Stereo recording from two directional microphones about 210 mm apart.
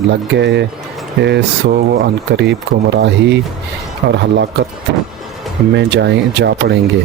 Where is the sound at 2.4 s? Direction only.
55° right (ahead or behind).